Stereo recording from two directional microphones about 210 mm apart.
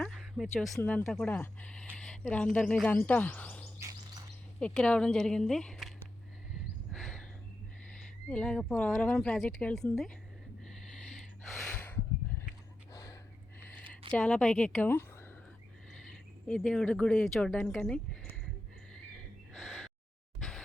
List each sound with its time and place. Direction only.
0.0 s speech: centre (ahead or behind)
3.8 s bird: 15° right (ahead or behind)
4.6 s speech: 5° left (ahead or behind)
6.9 s a sound: centre (ahead or behind)
8.3 s speech: 5° left (ahead or behind)
12.9 s a sound: 15° left (ahead or behind)
14.1 s speech: 5° left (ahead or behind)
16.5 s speech: 5° left (ahead or behind)
19.5 s owl: centre (ahead or behind)
20.4 s music: centre (ahead or behind)